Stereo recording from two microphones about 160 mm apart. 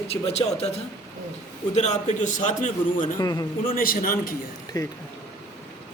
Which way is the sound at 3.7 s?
60° left (ahead or behind).